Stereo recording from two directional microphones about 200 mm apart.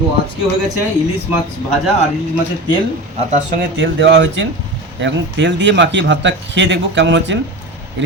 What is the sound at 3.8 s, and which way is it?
Speech, 60° right (ahead or behind).